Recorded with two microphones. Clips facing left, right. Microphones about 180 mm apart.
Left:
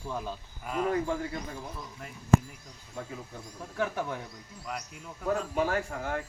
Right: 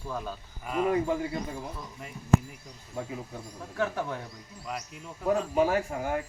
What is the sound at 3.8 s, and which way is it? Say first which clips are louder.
Speech: right 1 dB; 10° left (ahead or behind).